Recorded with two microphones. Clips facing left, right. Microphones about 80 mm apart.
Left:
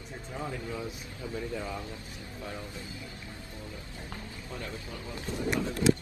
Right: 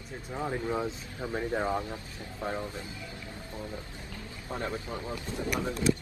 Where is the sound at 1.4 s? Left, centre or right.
Right.